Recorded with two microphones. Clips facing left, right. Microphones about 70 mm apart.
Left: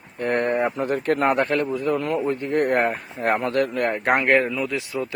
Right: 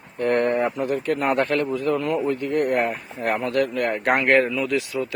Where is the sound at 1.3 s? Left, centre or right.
Centre.